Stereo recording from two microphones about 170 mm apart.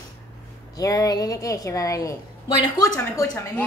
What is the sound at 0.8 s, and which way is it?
A woman's voice, 20° left (ahead or behind).